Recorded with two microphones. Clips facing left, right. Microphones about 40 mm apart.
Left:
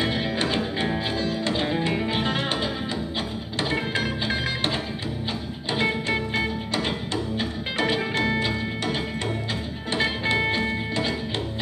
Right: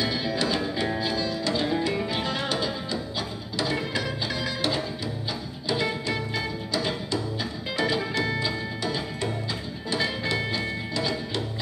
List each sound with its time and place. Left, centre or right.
0.0 s music: left